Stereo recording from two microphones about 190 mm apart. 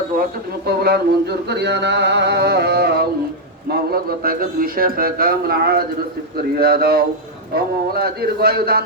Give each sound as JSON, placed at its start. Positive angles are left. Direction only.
{"t": 0.2, "sound": "a man's voice", "side_deg": -55}